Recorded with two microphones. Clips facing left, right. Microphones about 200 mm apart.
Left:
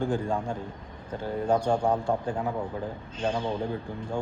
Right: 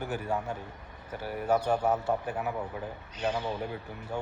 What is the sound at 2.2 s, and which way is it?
A man's voice, 25° left (ahead or behind).